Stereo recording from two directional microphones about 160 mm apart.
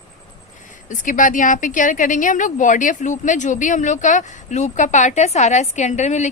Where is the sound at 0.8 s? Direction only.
55° left (ahead or behind).